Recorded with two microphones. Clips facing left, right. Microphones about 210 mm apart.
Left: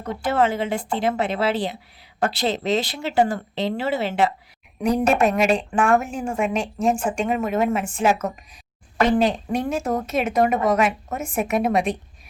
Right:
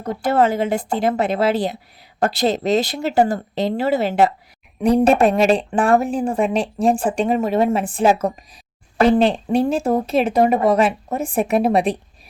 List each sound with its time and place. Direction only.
0.0 s a woman's voice: 40° right (ahead or behind)